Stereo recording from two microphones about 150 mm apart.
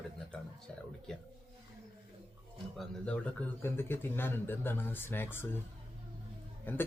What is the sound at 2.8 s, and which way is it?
Speech, 10° left (ahead or behind).